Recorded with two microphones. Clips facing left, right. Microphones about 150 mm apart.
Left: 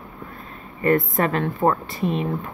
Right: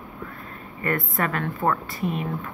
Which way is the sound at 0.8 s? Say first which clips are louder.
Left 6 dB; 25° left (ahead or behind).